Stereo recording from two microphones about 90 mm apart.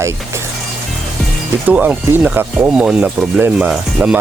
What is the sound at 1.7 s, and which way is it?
Speech, 20° right (ahead or behind).